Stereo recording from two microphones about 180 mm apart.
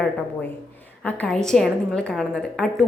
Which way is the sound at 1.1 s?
5° left (ahead or behind).